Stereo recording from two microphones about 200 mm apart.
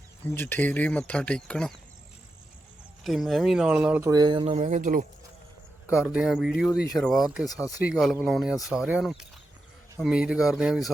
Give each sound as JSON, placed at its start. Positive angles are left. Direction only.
{"t": 0.3, "sound": "speech", "side_deg": 10}
{"t": 3.0, "sound": "speech", "side_deg": 0}
{"t": 4.1, "sound": "speech", "side_deg": -20}
{"t": 5.9, "sound": "speech", "side_deg": -5}
{"t": 7.4, "sound": "speech", "side_deg": 20}
{"t": 7.9, "sound": "speech", "side_deg": 0}